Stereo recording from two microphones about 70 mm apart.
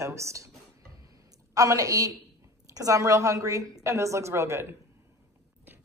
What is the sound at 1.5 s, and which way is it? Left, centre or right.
A woman's voice, right.